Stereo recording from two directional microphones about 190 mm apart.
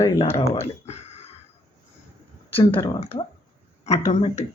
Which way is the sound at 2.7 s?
10° left (ahead or behind).